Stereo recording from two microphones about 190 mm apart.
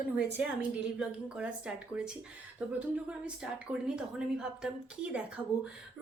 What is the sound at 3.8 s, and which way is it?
Speech, 5° right (ahead or behind).